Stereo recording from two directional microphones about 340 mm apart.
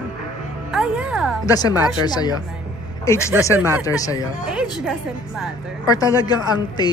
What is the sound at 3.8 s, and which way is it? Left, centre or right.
Speech, centre.